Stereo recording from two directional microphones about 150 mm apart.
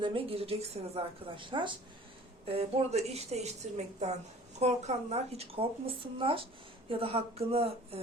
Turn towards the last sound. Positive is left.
turn(degrees=-40)  # may be behind; listen again after turning